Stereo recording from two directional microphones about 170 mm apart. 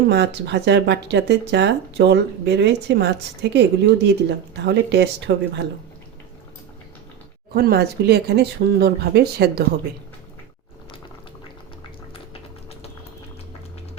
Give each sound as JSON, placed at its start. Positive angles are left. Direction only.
{"t": 0.1, "sound": "speech", "side_deg": -90}
{"t": 7.5, "sound": "speech", "side_deg": -70}